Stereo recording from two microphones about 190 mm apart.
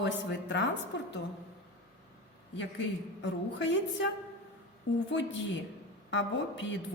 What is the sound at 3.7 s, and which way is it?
Speech, 70° left (ahead or behind).